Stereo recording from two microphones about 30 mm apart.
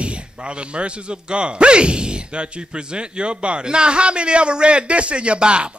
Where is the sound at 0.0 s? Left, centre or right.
Right.